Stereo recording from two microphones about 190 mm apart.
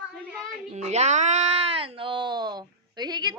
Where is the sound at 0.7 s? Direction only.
35° right (ahead or behind).